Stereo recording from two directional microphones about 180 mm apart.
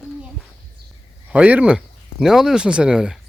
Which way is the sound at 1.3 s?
10° right (ahead or behind).